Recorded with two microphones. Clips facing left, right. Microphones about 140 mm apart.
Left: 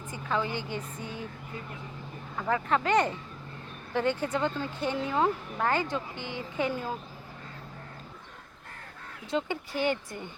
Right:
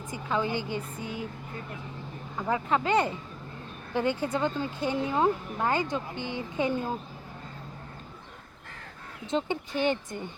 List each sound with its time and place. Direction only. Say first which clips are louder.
0.1 s speech: right 2 dB; 15° right (ahead or behind)
2.5 s speech: even; 15° right (ahead or behind)
9.2 s speech: right 2 dB; 20° right (ahead or behind)